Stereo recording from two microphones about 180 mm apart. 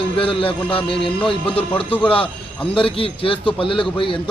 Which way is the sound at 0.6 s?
10° left (ahead or behind).